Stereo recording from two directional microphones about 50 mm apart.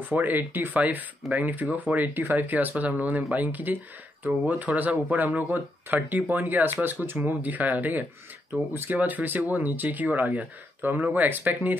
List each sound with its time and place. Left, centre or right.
0.1 s speech: right